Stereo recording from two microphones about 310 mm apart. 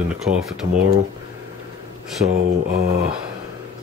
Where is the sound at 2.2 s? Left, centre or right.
Right.